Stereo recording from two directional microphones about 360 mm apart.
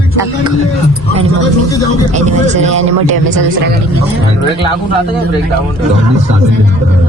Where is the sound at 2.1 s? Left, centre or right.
Centre.